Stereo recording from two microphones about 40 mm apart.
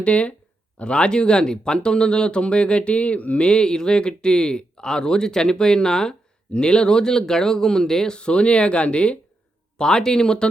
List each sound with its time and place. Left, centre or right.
0.0 s speech: left
9.7 s speech: centre